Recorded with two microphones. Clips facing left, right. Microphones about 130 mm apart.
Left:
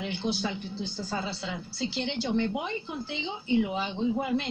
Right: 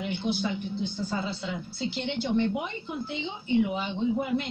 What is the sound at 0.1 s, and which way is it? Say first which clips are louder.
Speech: right 3 dB; 30° left (ahead or behind).